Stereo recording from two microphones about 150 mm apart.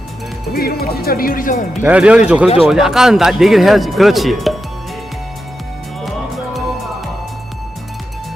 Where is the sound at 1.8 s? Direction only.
10° right (ahead or behind).